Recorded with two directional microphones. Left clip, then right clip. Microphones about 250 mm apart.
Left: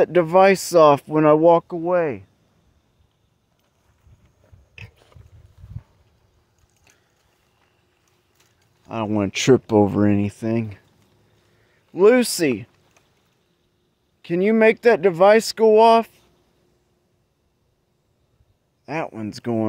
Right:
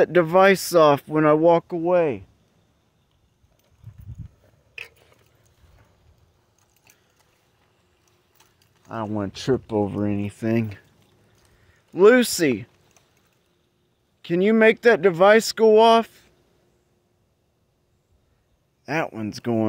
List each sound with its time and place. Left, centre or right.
0.0 s speech: centre
4.9 s a sound: centre
8.9 s speech: left
10.4 s speech: centre
11.9 s speech: centre
14.2 s speech: centre
18.9 s speech: centre